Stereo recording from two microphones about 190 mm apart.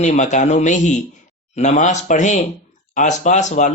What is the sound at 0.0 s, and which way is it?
Speech, 40° left (ahead or behind).